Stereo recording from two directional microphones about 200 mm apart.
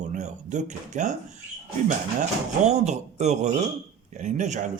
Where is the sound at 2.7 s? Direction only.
35° right (ahead or behind).